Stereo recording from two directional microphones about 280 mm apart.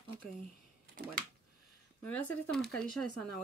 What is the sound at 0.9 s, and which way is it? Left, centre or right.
Speech, right.